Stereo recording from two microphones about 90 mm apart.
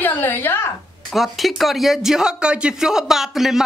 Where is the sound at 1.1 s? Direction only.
Centre (ahead or behind).